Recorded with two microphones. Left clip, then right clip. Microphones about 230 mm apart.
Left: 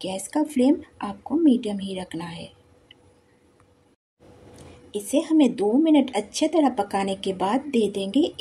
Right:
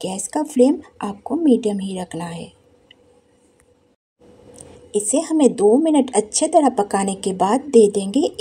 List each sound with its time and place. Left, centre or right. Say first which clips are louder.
0.0 s speech: right 2 dB; right
4.6 s speech: right 10 dB; right